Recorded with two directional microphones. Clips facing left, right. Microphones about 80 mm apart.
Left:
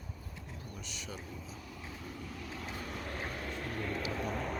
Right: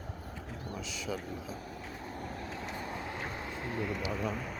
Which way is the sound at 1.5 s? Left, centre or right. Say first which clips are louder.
Right 4 dB; right.